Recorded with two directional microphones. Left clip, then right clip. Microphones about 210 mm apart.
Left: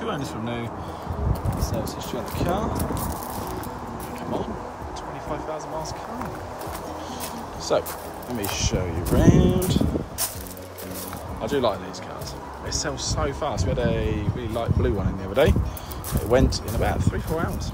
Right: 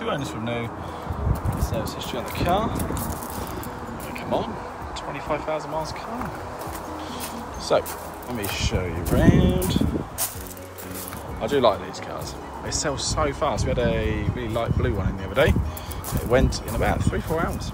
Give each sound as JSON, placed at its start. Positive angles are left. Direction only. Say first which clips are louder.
{"t": 0.0, "sound": "speech", "louder": "right 2 dB", "side_deg": 10}
{"t": 2.0, "sound": "speech", "louder": "right 3 dB", "side_deg": 50}
{"t": 2.5, "sound": "speech", "louder": "right 3 dB", "side_deg": 15}
{"t": 5.3, "sound": "speech", "louder": "right 5 dB", "side_deg": 10}
{"t": 7.7, "sound": "speech", "louder": "right 2 dB", "side_deg": 20}
{"t": 8.4, "sound": "speech", "louder": "left 1 dB", "side_deg": 60}
{"t": 8.7, "sound": "speech", "louder": "even", "side_deg": 15}
{"t": 11.4, "sound": "speech", "louder": "right 4 dB", "side_deg": 15}